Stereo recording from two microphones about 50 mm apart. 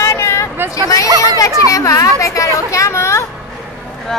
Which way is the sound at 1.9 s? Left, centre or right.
Left.